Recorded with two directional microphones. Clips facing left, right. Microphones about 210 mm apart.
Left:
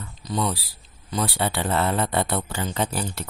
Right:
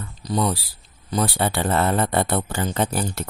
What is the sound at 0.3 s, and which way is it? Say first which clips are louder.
Speech: right 3 dB; 40° right (ahead or behind).